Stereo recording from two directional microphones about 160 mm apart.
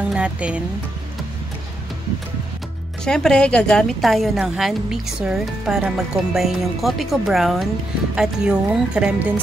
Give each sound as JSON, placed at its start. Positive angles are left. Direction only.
{"t": 0.1, "sound": "speech", "side_deg": -5}
{"t": 3.1, "sound": "a woman's voice", "side_deg": 5}